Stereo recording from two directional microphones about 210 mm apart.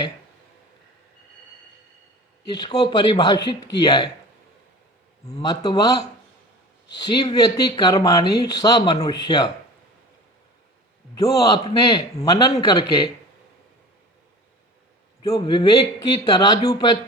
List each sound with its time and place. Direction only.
2.5 s speech: 20° left (ahead or behind)
5.2 s a man's voice: 20° left (ahead or behind)
11.2 s a man's voice: 15° left (ahead or behind)
15.2 s speech: 20° left (ahead or behind)